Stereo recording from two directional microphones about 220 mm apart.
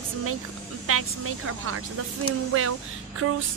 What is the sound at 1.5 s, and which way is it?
Speech, 90° right.